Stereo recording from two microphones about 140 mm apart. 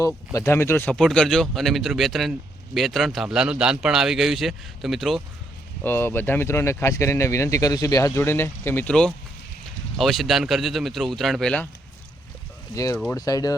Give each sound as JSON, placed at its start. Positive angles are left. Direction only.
{"t": 0.3, "sound": "speech", "side_deg": 20}
{"t": 0.9, "sound": "a man's voice", "side_deg": 5}
{"t": 5.8, "sound": "a man's voice", "side_deg": 15}
{"t": 12.7, "sound": "speech", "side_deg": 25}